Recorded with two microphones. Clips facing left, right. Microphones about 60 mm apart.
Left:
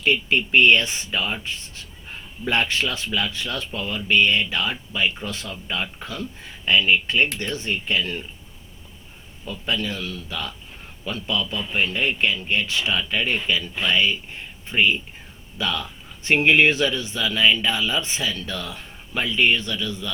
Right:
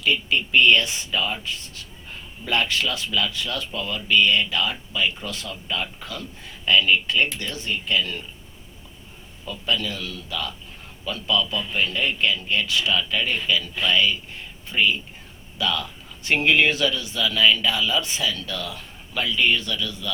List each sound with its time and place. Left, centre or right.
0.0 s a man's voice: left
9.5 s a man's voice: left